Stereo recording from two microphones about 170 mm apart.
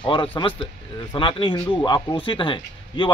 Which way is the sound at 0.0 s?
30° left (ahead or behind).